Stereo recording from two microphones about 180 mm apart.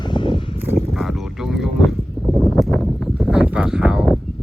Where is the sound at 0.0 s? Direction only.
25° left (ahead or behind).